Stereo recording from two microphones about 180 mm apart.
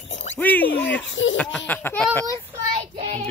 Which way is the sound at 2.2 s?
25° right (ahead or behind).